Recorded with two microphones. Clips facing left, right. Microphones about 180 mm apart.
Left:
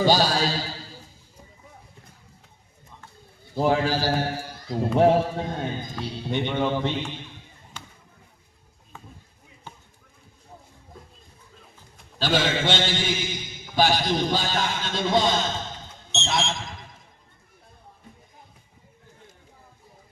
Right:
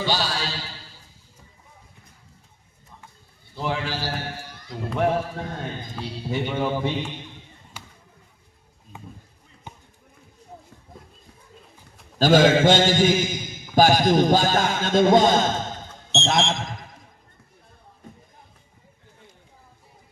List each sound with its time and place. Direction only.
0.0 s music: 40° left (ahead or behind)
3.5 s a man's voice: 40° left (ahead or behind)
4.9 s a man's voice: 30° left (ahead or behind)
5.9 s speech: centre (ahead or behind)
8.9 s a sound: 15° right (ahead or behind)
9.7 s basketball bounce: 15° right (ahead or behind)
12.2 s a man's voice: 45° right (ahead or behind)